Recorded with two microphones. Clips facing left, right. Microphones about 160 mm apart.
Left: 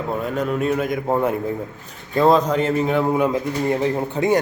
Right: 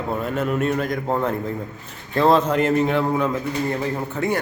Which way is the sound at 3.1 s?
15° left (ahead or behind).